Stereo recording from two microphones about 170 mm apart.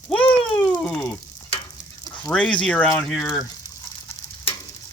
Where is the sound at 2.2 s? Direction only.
5° left (ahead or behind).